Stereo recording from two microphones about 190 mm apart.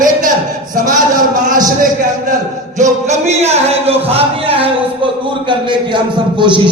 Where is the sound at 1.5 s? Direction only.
20° right (ahead or behind).